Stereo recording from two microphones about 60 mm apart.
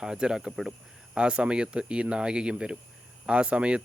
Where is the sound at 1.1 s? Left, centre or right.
Centre.